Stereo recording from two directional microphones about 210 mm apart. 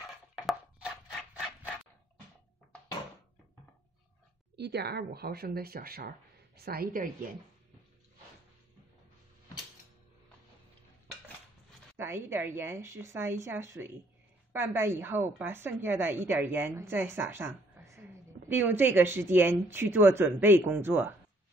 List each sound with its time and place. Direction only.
4.6 s speech: 50° right (ahead or behind)
12.0 s a woman's voice: 10° right (ahead or behind)